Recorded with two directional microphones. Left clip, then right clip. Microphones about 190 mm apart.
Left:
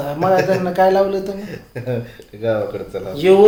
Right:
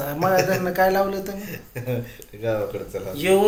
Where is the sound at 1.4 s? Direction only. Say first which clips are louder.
Left 4 dB; 20° left (ahead or behind).